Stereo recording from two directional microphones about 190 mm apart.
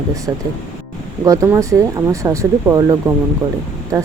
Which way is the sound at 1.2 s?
15° right (ahead or behind).